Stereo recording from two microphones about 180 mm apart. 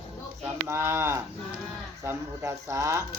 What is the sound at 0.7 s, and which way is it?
Speech, 15° right (ahead or behind).